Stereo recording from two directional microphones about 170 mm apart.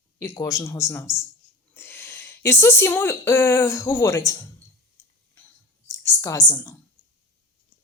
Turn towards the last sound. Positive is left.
turn(degrees=15)  # may be behind; listen again after turning